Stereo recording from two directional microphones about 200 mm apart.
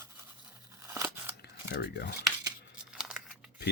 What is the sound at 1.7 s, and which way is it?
Speech, 55° left (ahead or behind).